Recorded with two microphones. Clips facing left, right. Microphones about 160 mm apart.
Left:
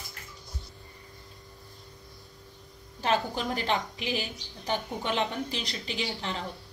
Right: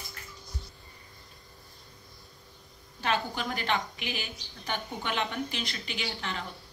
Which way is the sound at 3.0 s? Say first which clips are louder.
Left 3 dB; 35° left (ahead or behind).